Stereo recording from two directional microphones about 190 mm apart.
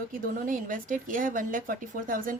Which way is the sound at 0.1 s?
45° right (ahead or behind).